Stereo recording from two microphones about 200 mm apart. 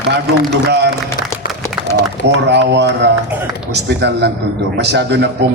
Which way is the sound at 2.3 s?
60° right (ahead or behind).